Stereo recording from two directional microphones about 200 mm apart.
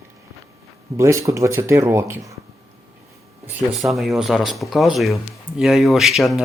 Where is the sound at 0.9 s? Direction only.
15° right (ahead or behind).